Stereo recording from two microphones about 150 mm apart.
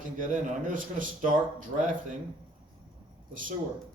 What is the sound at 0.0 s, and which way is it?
Speech, 60° right (ahead or behind).